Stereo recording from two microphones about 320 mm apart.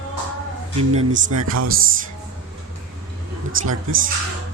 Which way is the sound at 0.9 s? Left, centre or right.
Centre.